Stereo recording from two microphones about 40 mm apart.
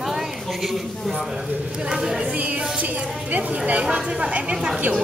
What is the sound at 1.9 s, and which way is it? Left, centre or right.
Speech, centre.